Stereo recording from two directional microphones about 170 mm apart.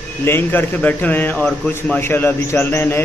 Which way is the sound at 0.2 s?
15° left (ahead or behind).